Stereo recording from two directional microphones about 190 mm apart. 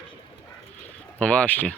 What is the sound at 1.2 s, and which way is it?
Speech, 5° left (ahead or behind).